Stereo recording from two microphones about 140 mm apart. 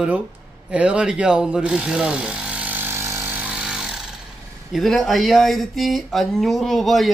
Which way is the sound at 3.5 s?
5° right (ahead or behind).